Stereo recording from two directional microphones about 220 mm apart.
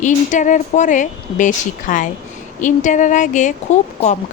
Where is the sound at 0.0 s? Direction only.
35° left (ahead or behind).